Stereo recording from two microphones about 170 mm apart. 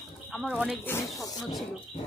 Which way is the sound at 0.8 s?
15° left (ahead or behind).